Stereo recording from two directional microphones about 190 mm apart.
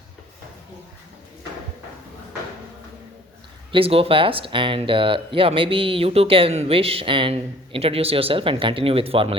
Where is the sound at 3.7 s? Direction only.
30° right (ahead or behind).